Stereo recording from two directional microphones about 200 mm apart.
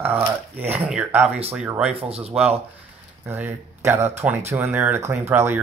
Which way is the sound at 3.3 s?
10° right (ahead or behind).